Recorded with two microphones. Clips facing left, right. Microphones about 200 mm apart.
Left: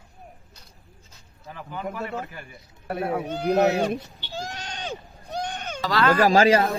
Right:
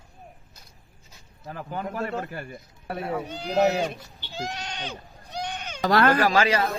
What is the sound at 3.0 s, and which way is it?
Speech, 60° left (ahead or behind).